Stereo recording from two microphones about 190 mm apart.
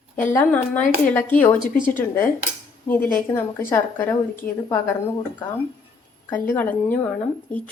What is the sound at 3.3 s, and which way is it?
A woman's voice, 15° left (ahead or behind).